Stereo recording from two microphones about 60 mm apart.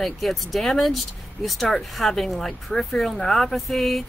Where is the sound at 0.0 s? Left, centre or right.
Centre.